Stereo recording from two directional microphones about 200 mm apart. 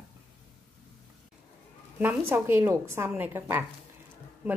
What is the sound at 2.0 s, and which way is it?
A woman's voice, 10° right (ahead or behind).